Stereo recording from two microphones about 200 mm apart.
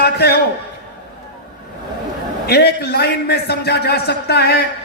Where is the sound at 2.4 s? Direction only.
55° left (ahead or behind).